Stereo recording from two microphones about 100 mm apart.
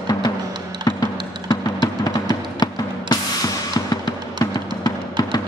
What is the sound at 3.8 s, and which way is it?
Music, 40° left (ahead or behind).